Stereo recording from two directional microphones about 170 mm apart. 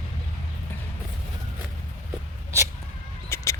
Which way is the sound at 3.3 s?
15° left (ahead or behind).